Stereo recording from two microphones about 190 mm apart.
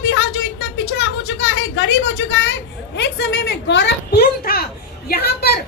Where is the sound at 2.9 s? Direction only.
60° left (ahead or behind).